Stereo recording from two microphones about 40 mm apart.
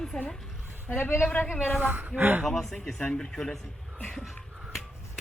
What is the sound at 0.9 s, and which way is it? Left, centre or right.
Speech, left.